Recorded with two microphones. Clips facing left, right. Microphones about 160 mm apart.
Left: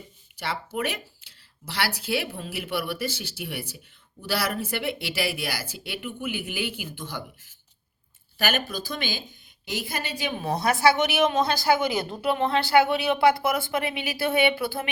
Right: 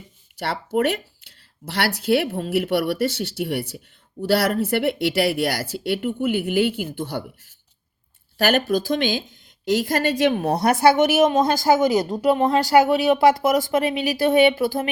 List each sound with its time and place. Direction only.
0.3 s speech: 65° right (ahead or behind)
8.4 s speech: 65° right (ahead or behind)
9.6 s a woman's voice: 80° right; by 14.8 s 40° right (ahead or behind)